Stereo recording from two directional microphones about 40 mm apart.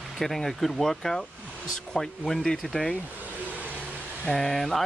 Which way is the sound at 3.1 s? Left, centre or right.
Right.